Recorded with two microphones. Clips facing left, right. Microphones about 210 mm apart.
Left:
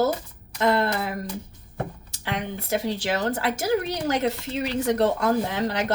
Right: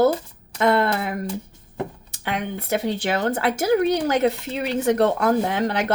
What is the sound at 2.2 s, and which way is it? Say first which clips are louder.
A woman's voice: right 3 dB; 55° right (ahead or behind).